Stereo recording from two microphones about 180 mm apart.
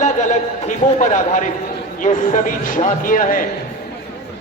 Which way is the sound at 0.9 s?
40° left (ahead or behind).